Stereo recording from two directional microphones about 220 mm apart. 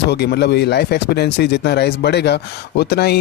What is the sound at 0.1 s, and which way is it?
Speech, 50° left (ahead or behind).